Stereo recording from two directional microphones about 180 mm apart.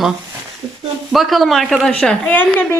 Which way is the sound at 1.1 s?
Centre (ahead or behind).